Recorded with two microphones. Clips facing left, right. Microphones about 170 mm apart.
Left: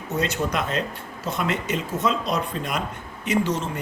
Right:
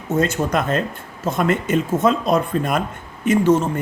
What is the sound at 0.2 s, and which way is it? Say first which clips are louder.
Speech: right 5 dB; 50° right (ahead or behind).